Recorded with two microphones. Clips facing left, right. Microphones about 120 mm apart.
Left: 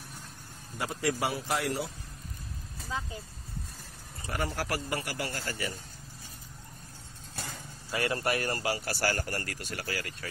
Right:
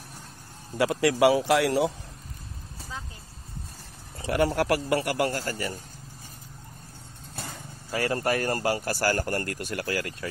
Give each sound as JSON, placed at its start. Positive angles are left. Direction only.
{"t": 0.7, "sound": "speech", "side_deg": -80}
{"t": 4.2, "sound": "speech", "side_deg": -70}
{"t": 5.3, "sound": "a man's voice", "side_deg": -40}
{"t": 7.9, "sound": "speech", "side_deg": -35}